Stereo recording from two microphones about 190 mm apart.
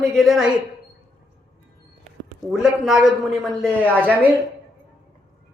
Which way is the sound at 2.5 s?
Centre (ahead or behind).